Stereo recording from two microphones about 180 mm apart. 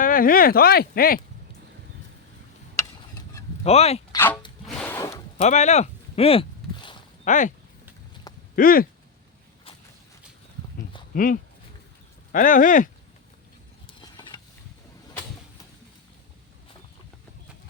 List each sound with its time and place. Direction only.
0.0 s speech: 50° left (ahead or behind)
3.6 s speech: 35° left (ahead or behind)
4.1 s speech: 10° left (ahead or behind)
4.6 s music: 5° left (ahead or behind)
5.4 s a sound: 40° left (ahead or behind)
7.3 s speech: 45° left (ahead or behind)
8.5 s speech: 50° left (ahead or behind)
11.1 s speech: 50° left (ahead or behind)
13.8 s a sound: 25° left (ahead or behind)